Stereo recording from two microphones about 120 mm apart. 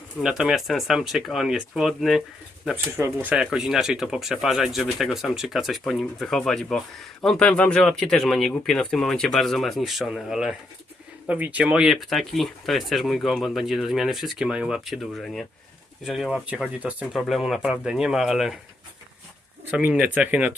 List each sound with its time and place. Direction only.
0.2 s speech: 5° right (ahead or behind)
2.7 s speech: 20° right (ahead or behind)
3.3 s speech: 5° right (ahead or behind)
19.7 s speech: 10° right (ahead or behind)